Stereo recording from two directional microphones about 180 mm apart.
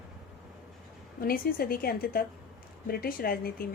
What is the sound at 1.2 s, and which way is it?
A woman's voice, 55° left (ahead or behind).